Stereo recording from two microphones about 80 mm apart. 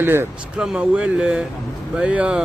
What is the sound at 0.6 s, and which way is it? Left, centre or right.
Speech, centre.